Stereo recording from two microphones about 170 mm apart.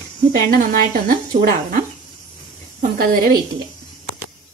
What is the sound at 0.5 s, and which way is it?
A woman's voice, 55° right (ahead or behind).